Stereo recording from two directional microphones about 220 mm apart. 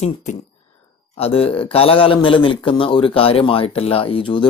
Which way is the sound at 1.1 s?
25° left (ahead or behind).